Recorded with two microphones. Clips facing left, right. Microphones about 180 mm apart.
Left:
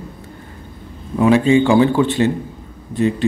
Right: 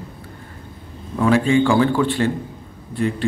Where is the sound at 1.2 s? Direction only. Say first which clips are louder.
Left 3 dB; 20° left (ahead or behind).